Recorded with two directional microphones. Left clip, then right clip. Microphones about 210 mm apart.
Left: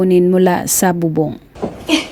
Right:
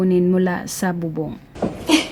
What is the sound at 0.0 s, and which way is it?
A woman's voice, 30° left (ahead or behind).